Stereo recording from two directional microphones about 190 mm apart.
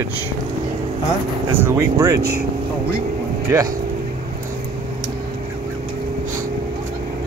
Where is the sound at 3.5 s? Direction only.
15° right (ahead or behind).